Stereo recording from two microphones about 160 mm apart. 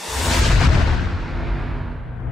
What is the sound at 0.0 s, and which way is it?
Music, centre (ahead or behind).